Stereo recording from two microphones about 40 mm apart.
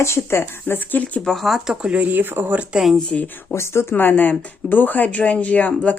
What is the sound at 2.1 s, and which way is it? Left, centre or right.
Speech, right.